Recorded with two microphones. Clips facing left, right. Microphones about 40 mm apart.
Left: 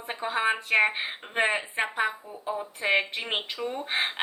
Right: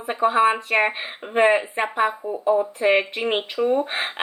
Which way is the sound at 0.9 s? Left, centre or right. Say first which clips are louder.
Right 6 dB; centre.